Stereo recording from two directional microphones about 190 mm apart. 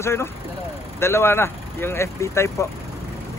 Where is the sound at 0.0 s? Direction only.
15° left (ahead or behind).